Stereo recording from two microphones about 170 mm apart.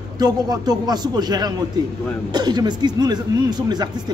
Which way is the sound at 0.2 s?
25° right (ahead or behind).